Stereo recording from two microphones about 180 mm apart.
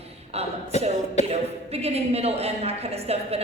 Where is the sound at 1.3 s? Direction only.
35° right (ahead or behind).